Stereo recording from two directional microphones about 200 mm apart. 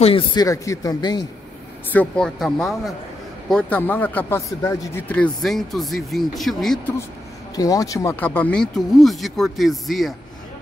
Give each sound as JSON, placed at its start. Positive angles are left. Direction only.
{"t": 0.0, "sound": "speech", "side_deg": 25}
{"t": 1.9, "sound": "speech", "side_deg": 5}
{"t": 7.5, "sound": "speech", "side_deg": 15}